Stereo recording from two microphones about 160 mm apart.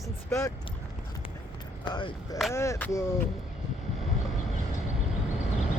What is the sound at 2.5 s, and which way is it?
Speech, 15° left (ahead or behind).